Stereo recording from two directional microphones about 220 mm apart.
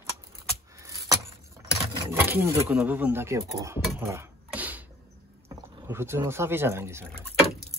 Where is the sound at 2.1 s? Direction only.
10° right (ahead or behind).